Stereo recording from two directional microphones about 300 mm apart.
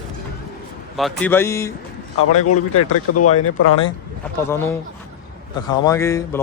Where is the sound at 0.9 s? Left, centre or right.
Centre.